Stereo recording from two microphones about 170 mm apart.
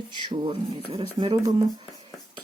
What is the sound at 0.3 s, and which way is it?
Speech, 30° right (ahead or behind).